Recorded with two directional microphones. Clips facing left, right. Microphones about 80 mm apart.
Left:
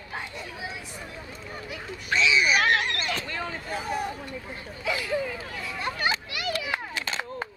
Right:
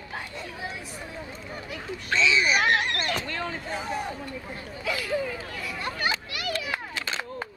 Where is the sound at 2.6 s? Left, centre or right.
Centre.